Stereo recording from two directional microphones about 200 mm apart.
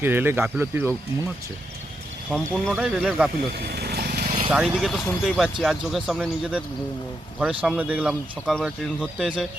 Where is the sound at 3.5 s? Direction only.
50° right (ahead or behind).